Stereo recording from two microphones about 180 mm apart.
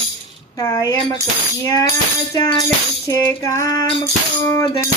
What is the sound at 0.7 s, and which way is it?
Female singing, 20° left (ahead or behind).